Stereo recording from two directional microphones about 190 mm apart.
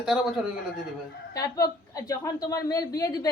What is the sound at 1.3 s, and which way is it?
A woman's voice, 15° left (ahead or behind).